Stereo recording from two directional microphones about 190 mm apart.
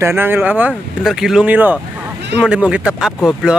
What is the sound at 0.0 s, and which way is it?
Speech, 10° right (ahead or behind).